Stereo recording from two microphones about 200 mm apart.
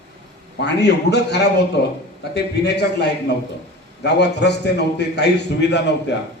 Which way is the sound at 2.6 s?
55° left (ahead or behind).